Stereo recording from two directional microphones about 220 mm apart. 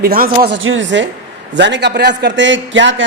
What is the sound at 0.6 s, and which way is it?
A man's voice, 60° right (ahead or behind).